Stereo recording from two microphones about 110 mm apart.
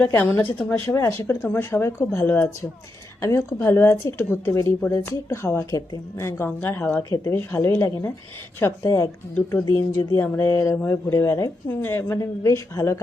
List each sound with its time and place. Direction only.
0.0 s a woman's voice: 20° left (ahead or behind)